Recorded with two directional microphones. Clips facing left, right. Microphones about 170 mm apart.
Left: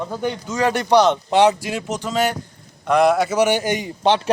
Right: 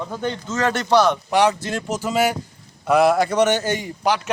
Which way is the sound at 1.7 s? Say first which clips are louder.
Right 1 dB; 5° left (ahead or behind).